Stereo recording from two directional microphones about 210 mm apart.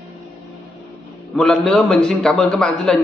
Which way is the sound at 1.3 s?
5° left (ahead or behind).